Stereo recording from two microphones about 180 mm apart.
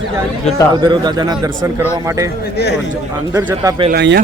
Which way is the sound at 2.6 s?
65° left (ahead or behind).